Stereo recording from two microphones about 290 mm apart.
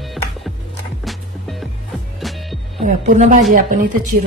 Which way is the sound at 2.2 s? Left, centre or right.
Centre.